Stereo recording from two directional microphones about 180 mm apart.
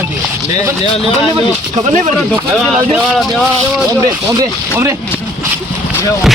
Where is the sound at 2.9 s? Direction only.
Centre (ahead or behind).